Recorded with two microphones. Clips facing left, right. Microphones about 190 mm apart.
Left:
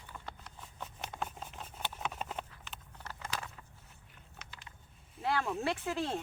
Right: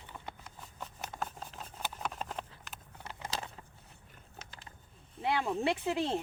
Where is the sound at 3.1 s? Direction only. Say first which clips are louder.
Right 2 dB; 20° right (ahead or behind).